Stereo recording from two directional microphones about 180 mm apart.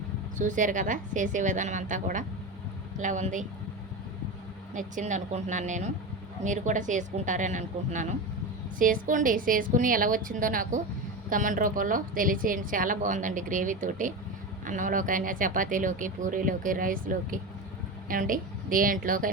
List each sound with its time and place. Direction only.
0.3 s a woman's voice: 45° right (ahead or behind)
4.7 s a woman's voice: 45° right (ahead or behind)